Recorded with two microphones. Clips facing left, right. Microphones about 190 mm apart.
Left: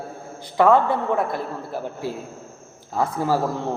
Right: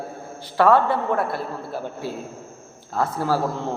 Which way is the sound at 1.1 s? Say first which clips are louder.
Left 1 dB; 15° left (ahead or behind).